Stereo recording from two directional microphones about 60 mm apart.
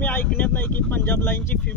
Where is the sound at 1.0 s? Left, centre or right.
Left.